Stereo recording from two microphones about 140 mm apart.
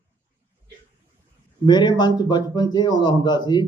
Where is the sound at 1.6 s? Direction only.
30° left (ahead or behind).